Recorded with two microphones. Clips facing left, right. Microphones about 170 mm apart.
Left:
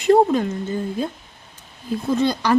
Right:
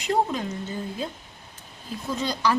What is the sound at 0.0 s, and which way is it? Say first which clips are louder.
Speech: left 10 dB; 55° left (ahead or behind).